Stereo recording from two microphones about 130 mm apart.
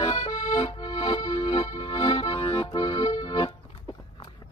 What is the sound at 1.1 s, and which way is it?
Music, 30° left (ahead or behind).